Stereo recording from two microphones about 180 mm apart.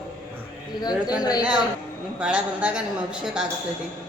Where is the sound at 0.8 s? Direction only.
20° left (ahead or behind).